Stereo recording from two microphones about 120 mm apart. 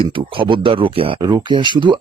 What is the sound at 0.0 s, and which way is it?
Speech, 45° right (ahead or behind).